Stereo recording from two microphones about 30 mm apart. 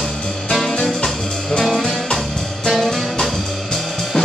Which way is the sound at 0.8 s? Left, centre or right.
Centre.